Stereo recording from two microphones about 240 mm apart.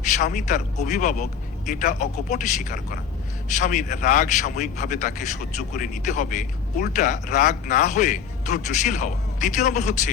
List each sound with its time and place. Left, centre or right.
0.0 s a man's voice: left